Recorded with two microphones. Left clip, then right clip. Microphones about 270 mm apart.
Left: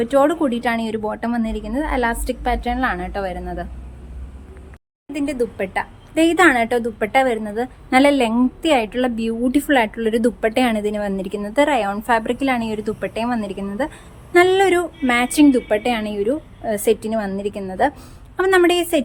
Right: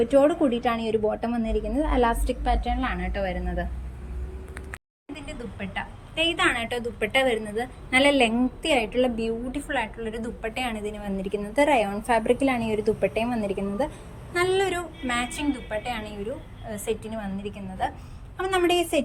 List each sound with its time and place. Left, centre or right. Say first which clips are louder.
0.0 s a woman's voice: left 3 dB; centre
5.1 s a woman's voice: left 16 dB; left